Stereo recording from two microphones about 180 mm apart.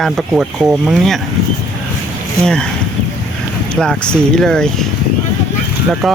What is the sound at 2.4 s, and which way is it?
Speech, 5° left (ahead or behind).